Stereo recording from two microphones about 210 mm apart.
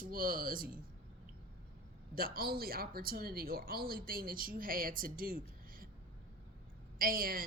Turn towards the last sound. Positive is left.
turn(degrees=-45)  # may be behind; listen again after turning